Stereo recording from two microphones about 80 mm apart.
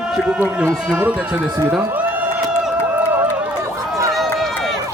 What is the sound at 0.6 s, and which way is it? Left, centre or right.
Speech, right.